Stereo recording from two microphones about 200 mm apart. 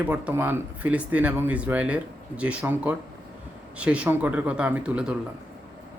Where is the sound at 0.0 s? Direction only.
5° right (ahead or behind).